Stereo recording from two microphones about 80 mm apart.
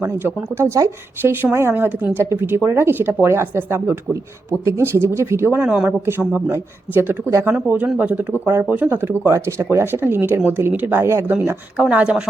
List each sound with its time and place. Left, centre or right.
0.2 s speech: right
4.8 s speech: right
5.6 s speech: centre
6.1 s speech: right
11.8 s speech: centre